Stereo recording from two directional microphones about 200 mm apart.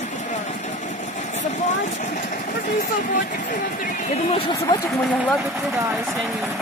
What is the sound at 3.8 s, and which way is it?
Speech, 35° left (ahead or behind).